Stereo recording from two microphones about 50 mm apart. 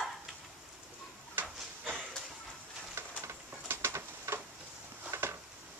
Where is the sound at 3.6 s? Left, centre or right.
Right.